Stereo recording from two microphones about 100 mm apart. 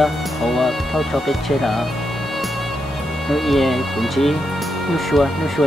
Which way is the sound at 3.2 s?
Centre (ahead or behind).